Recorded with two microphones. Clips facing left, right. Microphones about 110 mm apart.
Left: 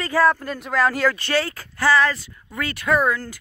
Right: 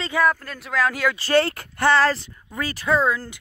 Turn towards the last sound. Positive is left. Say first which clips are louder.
# left 1 dB
turn(degrees=-25)  # may be behind; listen again after turning